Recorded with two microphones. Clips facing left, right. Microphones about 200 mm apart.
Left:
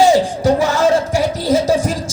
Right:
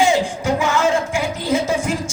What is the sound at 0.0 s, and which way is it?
Music, 35° left (ahead or behind).